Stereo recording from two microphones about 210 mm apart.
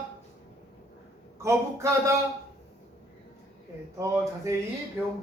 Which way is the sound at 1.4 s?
15° right (ahead or behind).